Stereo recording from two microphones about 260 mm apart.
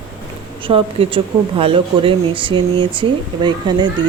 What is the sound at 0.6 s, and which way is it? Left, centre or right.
A woman's voice, right.